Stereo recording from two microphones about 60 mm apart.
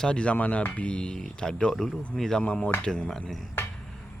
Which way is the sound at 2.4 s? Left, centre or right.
Centre.